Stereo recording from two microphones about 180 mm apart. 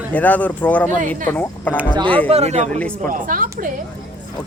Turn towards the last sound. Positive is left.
turn(degrees=-50)  # may be behind; listen again after turning